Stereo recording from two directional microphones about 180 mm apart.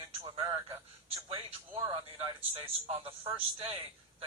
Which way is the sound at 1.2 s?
30° right (ahead or behind).